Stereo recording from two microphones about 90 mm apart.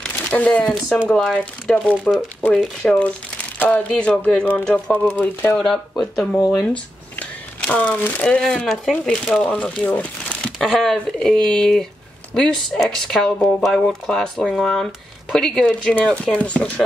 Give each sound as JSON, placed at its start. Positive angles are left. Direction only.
{"t": 0.0, "sound": "a sound", "side_deg": 15}
{"t": 1.0, "sound": "speech", "side_deg": 10}
{"t": 3.5, "sound": "speech", "side_deg": 15}
{"t": 5.6, "sound": "speech", "side_deg": 5}
{"t": 9.5, "sound": "speech", "side_deg": 15}
{"t": 10.6, "sound": "speech", "side_deg": 0}